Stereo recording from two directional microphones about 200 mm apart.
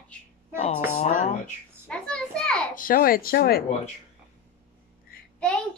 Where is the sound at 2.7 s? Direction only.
45° left (ahead or behind).